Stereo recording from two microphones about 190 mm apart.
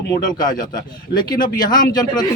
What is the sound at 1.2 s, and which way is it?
Speech, 20° left (ahead or behind).